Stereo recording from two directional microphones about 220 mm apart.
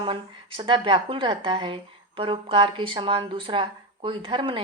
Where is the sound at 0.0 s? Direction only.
25° right (ahead or behind).